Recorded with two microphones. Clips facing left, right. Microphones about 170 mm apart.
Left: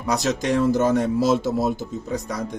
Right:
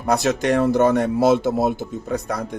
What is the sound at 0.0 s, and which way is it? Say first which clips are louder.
Speech: right 3 dB; 55° right (ahead or behind).